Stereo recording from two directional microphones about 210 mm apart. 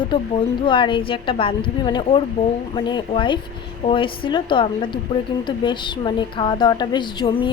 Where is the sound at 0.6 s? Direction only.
25° left (ahead or behind).